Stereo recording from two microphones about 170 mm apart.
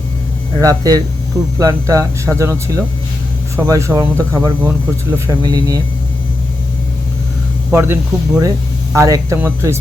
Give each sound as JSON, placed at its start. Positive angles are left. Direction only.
{"t": 0.6, "sound": "speech", "side_deg": -20}
{"t": 7.7, "sound": "speech", "side_deg": -15}